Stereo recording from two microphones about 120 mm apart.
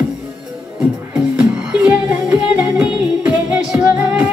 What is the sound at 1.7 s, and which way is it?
Music, 10° right (ahead or behind).